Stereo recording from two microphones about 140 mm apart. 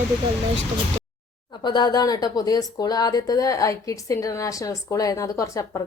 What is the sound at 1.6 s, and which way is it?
Speech, 30° left (ahead or behind).